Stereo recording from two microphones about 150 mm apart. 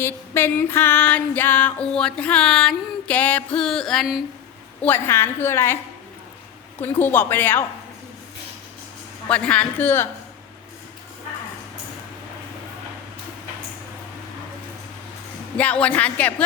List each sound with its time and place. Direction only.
0.0 s female singing: 15° left (ahead or behind)
4.8 s female singing: 15° left (ahead or behind)
6.7 s female singing: 15° left (ahead or behind)
9.3 s female singing: 10° left (ahead or behind)
15.5 s female singing: 10° left (ahead or behind)